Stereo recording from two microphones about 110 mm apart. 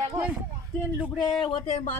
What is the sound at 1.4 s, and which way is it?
Speech, 65° left (ahead or behind).